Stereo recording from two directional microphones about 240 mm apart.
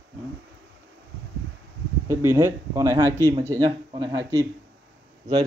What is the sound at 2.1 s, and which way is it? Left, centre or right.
Speech, centre.